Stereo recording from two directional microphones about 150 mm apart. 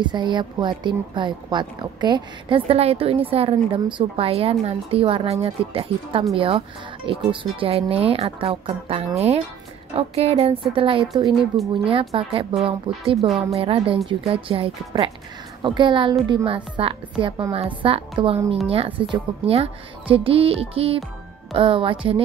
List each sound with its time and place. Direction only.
0.0 s a woman's voice: 30° right (ahead or behind)
11.3 s speech: centre (ahead or behind)
11.8 s a woman's voice: 35° right (ahead or behind)